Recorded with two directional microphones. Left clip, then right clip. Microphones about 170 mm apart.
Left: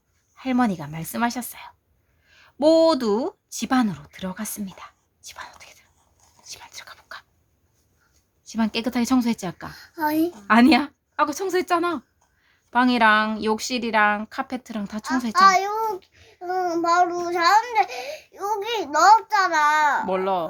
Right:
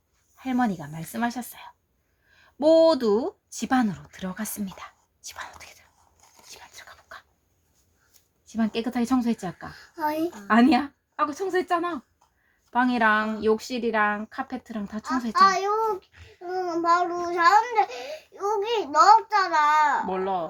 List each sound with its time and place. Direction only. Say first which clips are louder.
0.3 s speech: left 3 dB; 35° left (ahead or behind); by 5.7 s 15° left (ahead or behind)
6.5 s whispering: left 5 dB; 25° left (ahead or behind)
8.4 s speech: left 3 dB; 35° left (ahead or behind)
9.6 s a woman's voice: left 3 dB; 60° left (ahead or behind)
10.4 s speech: left 3 dB; 35° left (ahead or behind)
15.3 s a child's voice: left 3 dB; 65° left (ahead or behind)
20.1 s speech: left 4 dB; 45° left (ahead or behind)